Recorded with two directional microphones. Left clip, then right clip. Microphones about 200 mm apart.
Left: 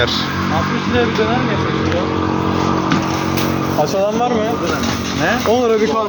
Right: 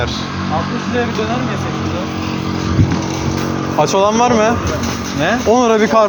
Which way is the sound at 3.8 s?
60° right (ahead or behind).